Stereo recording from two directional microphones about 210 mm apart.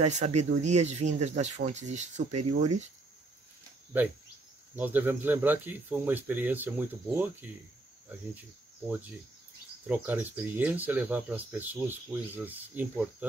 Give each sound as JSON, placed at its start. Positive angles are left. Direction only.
{"t": 0.0, "sound": "speech", "side_deg": -30}
{"t": 3.9, "sound": "speech", "side_deg": -10}
{"t": 9.8, "sound": "speech", "side_deg": -10}